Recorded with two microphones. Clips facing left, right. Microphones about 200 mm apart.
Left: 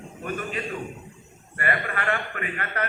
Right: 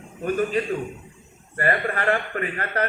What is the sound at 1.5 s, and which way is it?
A man's voice, 40° right (ahead or behind).